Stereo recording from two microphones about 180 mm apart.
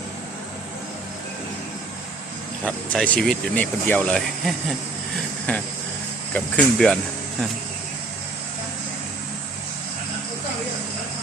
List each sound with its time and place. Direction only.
2.6 s speech: 5° left (ahead or behind)
5.5 s cricket: 10° left (ahead or behind)
6.3 s speech: 5° left (ahead or behind)